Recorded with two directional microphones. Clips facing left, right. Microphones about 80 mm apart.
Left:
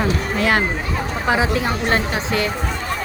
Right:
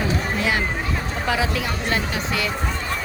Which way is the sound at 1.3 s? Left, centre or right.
Left.